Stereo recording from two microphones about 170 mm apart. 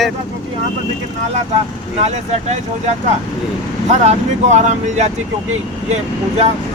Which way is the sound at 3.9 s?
40° right (ahead or behind).